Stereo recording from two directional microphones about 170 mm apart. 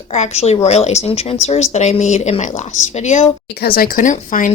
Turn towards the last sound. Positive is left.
turn(degrees=50)  # may be behind; listen again after turning